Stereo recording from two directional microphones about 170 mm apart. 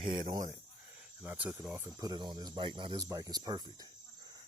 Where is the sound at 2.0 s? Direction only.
25° right (ahead or behind).